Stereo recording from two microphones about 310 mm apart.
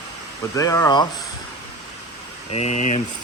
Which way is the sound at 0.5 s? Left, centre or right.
Centre.